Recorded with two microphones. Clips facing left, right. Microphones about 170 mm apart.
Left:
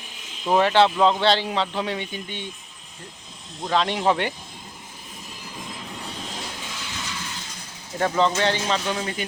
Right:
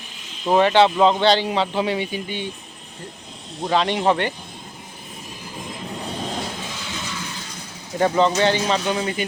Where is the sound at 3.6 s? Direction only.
5° right (ahead or behind).